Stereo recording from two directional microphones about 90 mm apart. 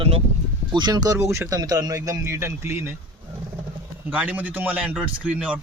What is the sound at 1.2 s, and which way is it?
Speech, 30° right (ahead or behind).